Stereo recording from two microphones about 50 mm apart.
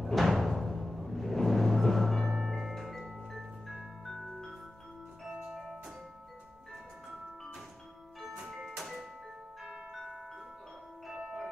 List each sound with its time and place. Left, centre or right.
0.0 s music: centre
5.2 s music: centre
8.5 s music: centre